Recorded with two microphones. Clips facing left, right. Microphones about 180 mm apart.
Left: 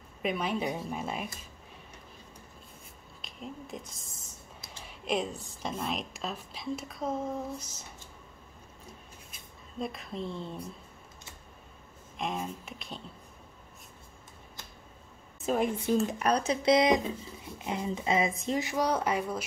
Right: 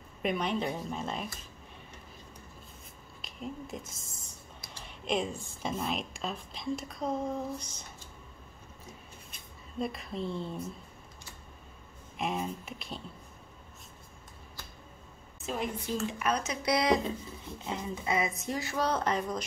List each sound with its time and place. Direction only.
0.2 s speech: 5° left (ahead or behind)
3.2 s a woman's voice: centre (ahead or behind)
9.3 s speech: centre (ahead or behind)
12.2 s a woman's voice: centre (ahead or behind)
15.4 s speech: 50° left (ahead or behind)
16.1 s speech: 40° left (ahead or behind); by 19.4 s 10° left (ahead or behind)